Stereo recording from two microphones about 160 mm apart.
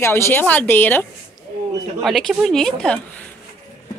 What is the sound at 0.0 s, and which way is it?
A woman's voice, 15° left (ahead or behind).